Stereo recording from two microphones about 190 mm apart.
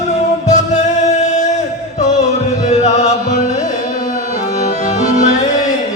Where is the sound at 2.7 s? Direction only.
35° left (ahead or behind).